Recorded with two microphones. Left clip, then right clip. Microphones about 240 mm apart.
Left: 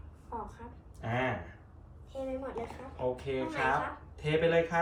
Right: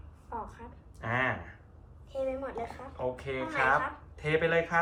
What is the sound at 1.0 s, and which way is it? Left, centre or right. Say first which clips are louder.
Speech: right 3 dB; centre.